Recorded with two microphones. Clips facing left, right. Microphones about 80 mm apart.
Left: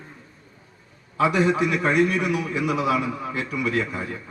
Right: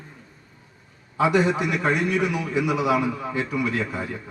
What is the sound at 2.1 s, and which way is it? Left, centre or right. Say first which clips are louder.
A man's voice: even; right.